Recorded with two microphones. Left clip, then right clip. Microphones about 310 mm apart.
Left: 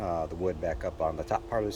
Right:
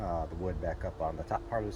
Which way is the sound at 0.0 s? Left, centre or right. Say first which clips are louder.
Left 5 dB; centre.